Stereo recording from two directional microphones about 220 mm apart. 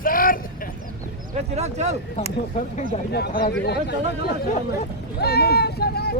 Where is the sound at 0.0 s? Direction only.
40° left (ahead or behind).